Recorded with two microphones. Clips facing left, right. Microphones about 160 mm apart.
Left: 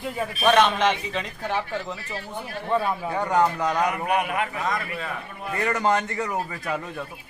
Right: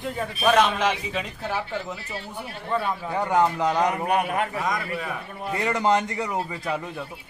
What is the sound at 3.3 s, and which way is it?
A man's voice, 20° right (ahead or behind).